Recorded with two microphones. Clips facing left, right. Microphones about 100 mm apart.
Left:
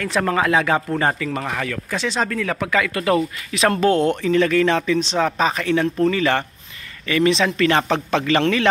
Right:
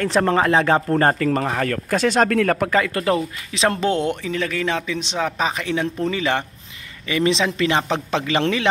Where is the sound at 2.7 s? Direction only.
35° right (ahead or behind).